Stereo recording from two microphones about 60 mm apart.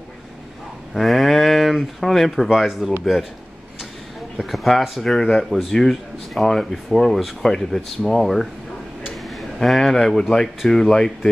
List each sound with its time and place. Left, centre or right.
0.9 s speech: centre
4.4 s speech: centre
9.6 s speech: centre